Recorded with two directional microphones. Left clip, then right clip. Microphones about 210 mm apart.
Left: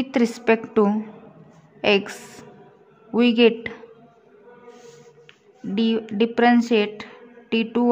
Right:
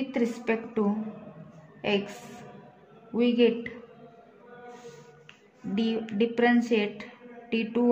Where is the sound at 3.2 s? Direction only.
30° left (ahead or behind).